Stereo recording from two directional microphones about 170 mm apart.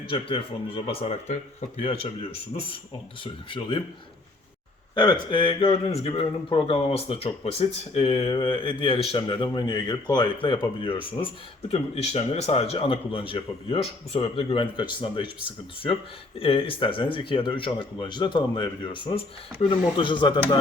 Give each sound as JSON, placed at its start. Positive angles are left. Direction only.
{"t": 0.1, "sound": "speech", "side_deg": 30}
{"t": 3.5, "sound": "speech", "side_deg": 30}
{"t": 4.9, "sound": "speech", "side_deg": 25}
{"t": 16.4, "sound": "speech", "side_deg": 30}